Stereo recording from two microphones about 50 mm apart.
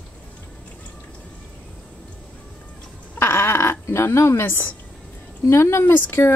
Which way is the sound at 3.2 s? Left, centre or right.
Left.